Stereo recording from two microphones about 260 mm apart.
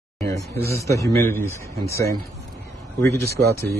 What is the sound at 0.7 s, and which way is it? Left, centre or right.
A man's voice, centre.